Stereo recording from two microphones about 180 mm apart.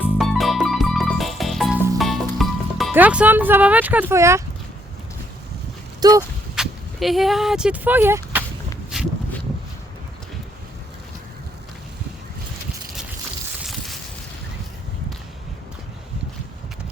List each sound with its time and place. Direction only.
0.2 s music: centre (ahead or behind)
2.9 s speech: 10° right (ahead or behind)
6.0 s speech: 20° right (ahead or behind)
6.6 s speech: centre (ahead or behind)
8.9 s a sound: 5° right (ahead or behind)
13.7 s a sound: centre (ahead or behind)